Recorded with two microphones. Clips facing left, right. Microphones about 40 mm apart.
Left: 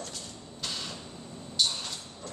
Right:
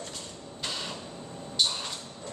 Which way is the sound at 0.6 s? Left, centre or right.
Centre.